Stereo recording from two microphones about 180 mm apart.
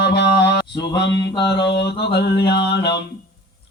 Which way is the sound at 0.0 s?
70° left (ahead or behind).